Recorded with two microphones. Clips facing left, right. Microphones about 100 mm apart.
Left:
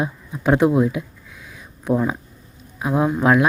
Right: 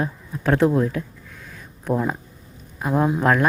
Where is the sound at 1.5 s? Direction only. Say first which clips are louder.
Left 3 dB; 5° left (ahead or behind).